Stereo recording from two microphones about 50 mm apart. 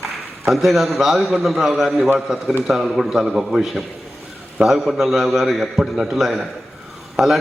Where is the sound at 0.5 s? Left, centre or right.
Centre.